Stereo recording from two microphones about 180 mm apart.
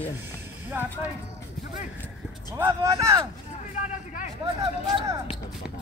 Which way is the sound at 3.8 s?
45° left (ahead or behind).